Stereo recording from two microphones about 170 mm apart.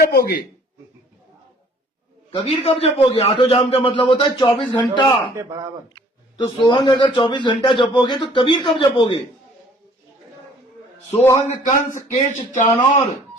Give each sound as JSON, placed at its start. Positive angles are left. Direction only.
{"t": 0.0, "sound": "speech", "side_deg": 65}
{"t": 2.3, "sound": "a man's voice", "side_deg": 35}
{"t": 11.2, "sound": "a man's voice", "side_deg": 15}
{"t": 11.9, "sound": "a man's voice", "side_deg": 40}